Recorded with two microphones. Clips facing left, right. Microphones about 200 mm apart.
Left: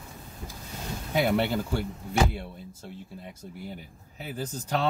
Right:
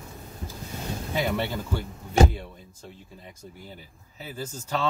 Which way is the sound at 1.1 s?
10° left (ahead or behind).